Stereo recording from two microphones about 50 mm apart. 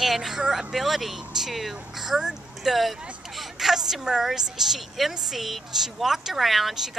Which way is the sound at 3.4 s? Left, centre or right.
Centre.